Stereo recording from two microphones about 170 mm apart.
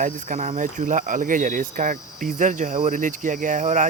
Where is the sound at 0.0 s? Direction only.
50° right (ahead or behind).